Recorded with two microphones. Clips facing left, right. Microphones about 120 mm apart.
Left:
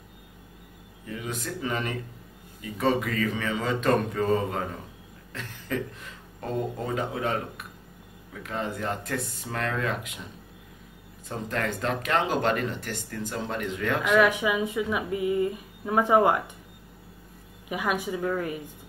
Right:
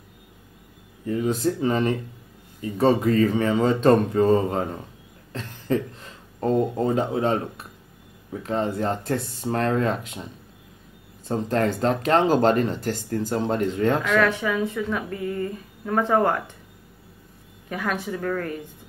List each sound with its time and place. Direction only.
1.0 s speech: 35° right (ahead or behind)
11.2 s speech: 35° right (ahead or behind)
14.0 s speech: 10° left (ahead or behind)
17.6 s speech: 10° left (ahead or behind)